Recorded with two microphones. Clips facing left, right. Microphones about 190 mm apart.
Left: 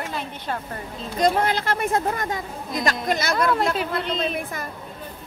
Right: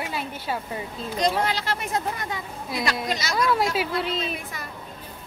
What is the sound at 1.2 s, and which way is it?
Speech, 50° left (ahead or behind).